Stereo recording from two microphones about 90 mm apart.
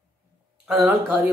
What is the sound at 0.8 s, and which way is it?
Speech, 20° right (ahead or behind).